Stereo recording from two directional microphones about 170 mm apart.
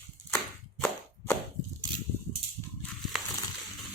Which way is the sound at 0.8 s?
10° left (ahead or behind).